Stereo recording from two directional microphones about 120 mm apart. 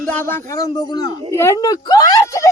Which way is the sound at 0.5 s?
30° left (ahead or behind).